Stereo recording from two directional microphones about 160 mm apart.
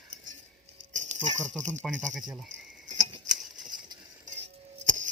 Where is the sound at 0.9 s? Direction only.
50° right (ahead or behind).